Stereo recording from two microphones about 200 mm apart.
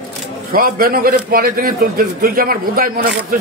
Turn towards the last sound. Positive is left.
turn(degrees=-45)  # may be behind; listen again after turning